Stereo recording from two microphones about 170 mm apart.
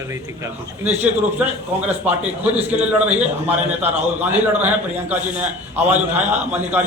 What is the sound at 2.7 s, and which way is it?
A man's voice, 5° right (ahead or behind).